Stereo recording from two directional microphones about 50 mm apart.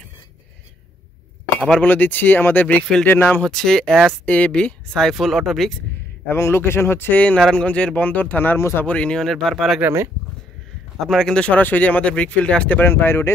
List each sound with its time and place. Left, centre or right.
1.8 s speech: left
3.4 s speech: centre
4.3 s speech: left
4.9 s speech: centre
6.2 s a man's voice: left
7.1 s speech: left
8.5 s a man's voice: left
8.8 s speech: left
9.2 s speech: centre
11.0 s speech: centre
11.3 s speech: left
12.7 s speech: left